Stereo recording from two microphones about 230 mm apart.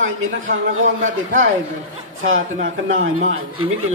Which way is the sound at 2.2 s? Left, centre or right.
Right.